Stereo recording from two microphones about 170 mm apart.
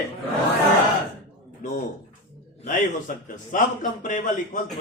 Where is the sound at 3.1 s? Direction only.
50° left (ahead or behind).